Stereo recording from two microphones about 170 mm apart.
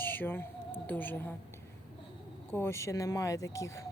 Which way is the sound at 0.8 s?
10° left (ahead or behind).